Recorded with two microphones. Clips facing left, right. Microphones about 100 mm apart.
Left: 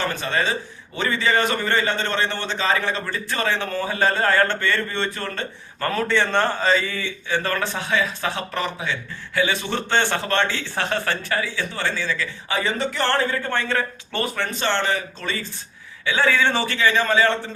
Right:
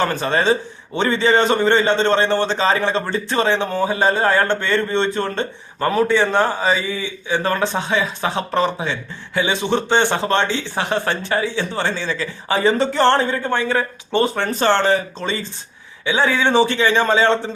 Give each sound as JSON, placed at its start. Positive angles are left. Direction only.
{"t": 0.0, "sound": "a man's voice", "side_deg": -35}
{"t": 14.2, "sound": "a man's voice", "side_deg": -35}